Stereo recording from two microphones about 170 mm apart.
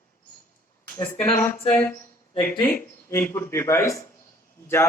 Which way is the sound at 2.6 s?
15° left (ahead or behind).